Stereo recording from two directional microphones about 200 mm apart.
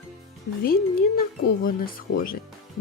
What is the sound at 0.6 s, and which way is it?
Speech, 45° left (ahead or behind).